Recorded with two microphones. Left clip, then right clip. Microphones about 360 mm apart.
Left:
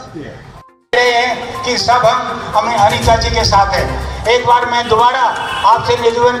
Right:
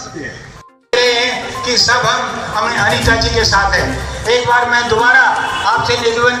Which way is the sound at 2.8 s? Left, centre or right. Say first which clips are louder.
Left 2 dB; centre.